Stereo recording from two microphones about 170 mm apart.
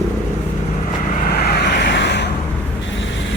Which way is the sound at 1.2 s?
65° left (ahead or behind).